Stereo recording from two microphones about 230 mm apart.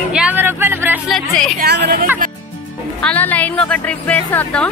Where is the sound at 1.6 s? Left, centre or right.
Right.